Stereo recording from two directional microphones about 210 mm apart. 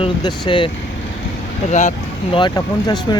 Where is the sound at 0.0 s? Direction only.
20° left (ahead or behind).